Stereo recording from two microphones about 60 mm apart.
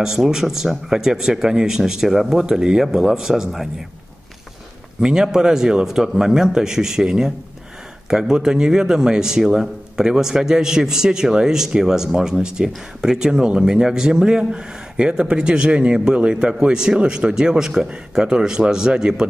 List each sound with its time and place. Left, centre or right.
0.0 s a man's voice: centre
5.0 s a man's voice: centre